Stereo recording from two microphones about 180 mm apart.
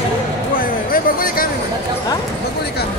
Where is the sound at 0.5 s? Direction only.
55° left (ahead or behind).